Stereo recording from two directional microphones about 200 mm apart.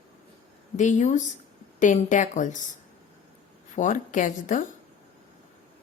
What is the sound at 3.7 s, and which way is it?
Speech, 40° left (ahead or behind).